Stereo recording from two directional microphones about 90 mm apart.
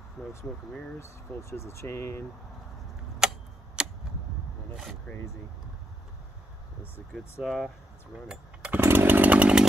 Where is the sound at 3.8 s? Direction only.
10° right (ahead or behind).